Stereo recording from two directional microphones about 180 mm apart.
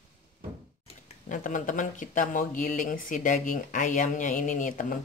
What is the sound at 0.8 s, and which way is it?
Speech, 45° left (ahead or behind).